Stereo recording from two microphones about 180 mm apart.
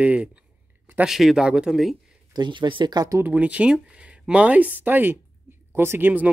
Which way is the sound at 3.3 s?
5° right (ahead or behind).